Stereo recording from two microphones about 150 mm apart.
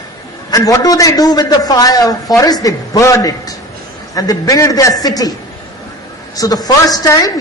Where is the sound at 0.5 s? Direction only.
25° left (ahead or behind).